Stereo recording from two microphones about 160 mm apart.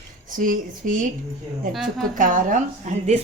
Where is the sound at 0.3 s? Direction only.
55° right (ahead or behind).